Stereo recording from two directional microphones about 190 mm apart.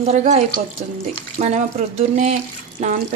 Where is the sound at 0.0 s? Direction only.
35° right (ahead or behind).